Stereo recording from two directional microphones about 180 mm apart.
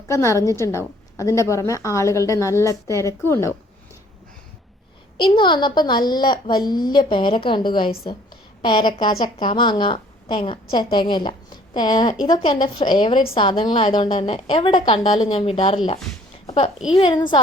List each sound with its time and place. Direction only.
0.1 s a woman's voice: 15° left (ahead or behind)
5.1 s a woman's voice: 25° left (ahead or behind)
16.9 s a woman's voice: 25° left (ahead or behind)